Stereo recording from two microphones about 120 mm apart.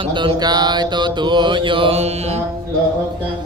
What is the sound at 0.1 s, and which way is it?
Mantra, 40° right (ahead or behind).